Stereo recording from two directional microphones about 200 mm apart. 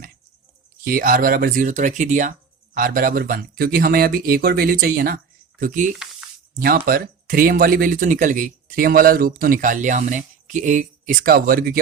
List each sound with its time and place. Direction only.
0.9 s speech: 45° right (ahead or behind)
5.9 s speech: centre (ahead or behind)
6.6 s speech: 50° right (ahead or behind)